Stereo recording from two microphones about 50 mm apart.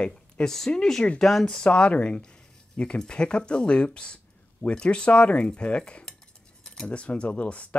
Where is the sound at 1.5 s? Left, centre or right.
Left.